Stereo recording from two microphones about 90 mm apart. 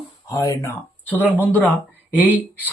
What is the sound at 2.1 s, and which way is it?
Speech, 15° right (ahead or behind).